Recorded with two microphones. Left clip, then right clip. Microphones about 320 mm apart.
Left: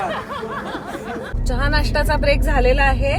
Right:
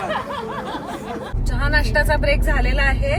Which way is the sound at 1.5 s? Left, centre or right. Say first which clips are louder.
Even; centre.